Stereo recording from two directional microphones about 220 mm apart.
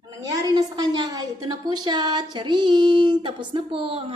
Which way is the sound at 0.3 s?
15° right (ahead or behind).